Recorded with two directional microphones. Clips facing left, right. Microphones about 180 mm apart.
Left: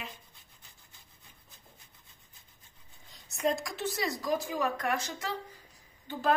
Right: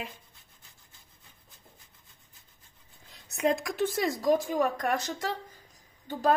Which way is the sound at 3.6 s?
50° right (ahead or behind).